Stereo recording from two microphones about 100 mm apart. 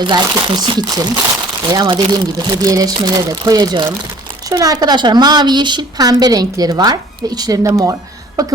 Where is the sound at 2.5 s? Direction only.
35° right (ahead or behind).